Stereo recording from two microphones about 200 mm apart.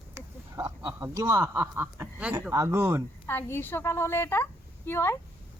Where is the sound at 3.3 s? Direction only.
10° left (ahead or behind).